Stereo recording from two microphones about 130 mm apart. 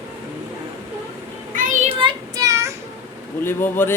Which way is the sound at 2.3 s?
25° right (ahead or behind).